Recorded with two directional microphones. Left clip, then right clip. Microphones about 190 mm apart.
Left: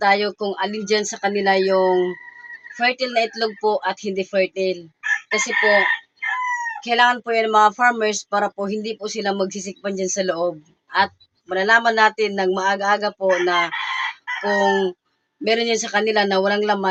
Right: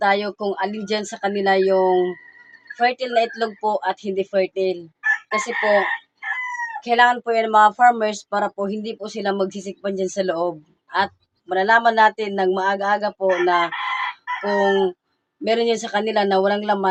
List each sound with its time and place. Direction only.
0.0 s speech: centre (ahead or behind)